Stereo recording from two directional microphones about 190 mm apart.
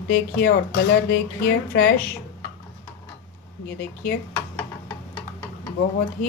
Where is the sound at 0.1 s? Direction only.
60° left (ahead or behind).